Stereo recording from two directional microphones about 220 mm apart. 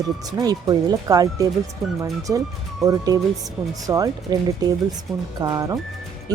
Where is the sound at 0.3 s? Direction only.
15° right (ahead or behind).